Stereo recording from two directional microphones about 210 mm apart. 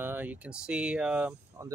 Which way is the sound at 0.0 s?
10° right (ahead or behind).